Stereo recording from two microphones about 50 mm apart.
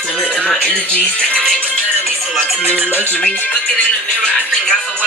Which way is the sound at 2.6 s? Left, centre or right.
Right.